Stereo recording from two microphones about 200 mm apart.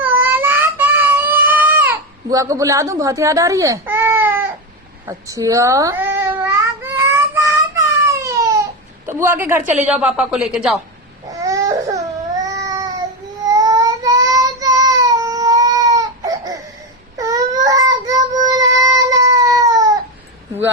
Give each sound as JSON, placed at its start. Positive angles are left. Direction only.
{"t": 0.0, "sound": "a sound", "side_deg": -10}
{"t": 5.0, "sound": "cat", "side_deg": -15}
{"t": 9.0, "sound": "a man's voice", "side_deg": -10}
{"t": 11.3, "sound": "baby cry", "side_deg": -15}
{"t": 13.5, "sound": "child singing", "side_deg": -20}